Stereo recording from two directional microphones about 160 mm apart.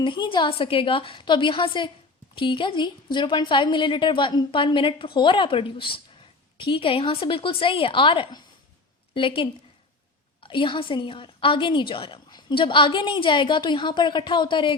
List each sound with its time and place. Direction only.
0.0 s a woman's voice: 30° left (ahead or behind)